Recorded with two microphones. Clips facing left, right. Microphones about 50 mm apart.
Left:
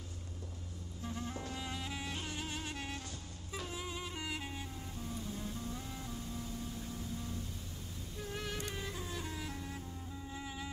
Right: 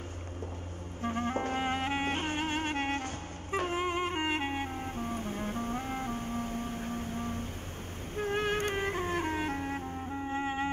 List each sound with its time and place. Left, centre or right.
1.0 s music: right